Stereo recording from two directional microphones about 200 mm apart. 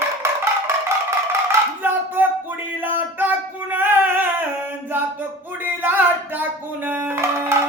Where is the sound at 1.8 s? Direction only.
10° right (ahead or behind).